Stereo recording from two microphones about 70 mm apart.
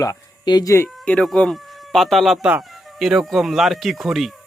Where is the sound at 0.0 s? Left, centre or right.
Left.